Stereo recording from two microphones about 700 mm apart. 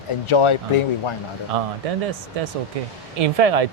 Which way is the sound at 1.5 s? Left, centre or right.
Right.